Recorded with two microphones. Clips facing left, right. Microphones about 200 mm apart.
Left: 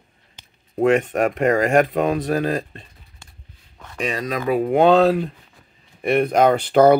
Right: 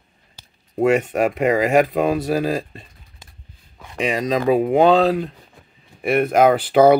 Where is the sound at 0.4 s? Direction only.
5° right (ahead or behind).